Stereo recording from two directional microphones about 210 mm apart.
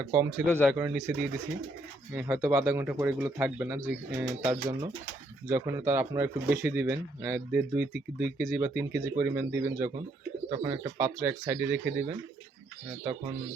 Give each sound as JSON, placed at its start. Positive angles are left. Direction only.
{"t": 0.0, "sound": "speech", "side_deg": -10}
{"t": 0.4, "sound": "speech", "side_deg": 5}
{"t": 0.7, "sound": "speech", "side_deg": -10}
{"t": 2.1, "sound": "speech", "side_deg": -10}